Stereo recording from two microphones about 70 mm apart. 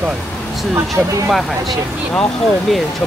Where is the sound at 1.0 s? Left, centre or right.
Right.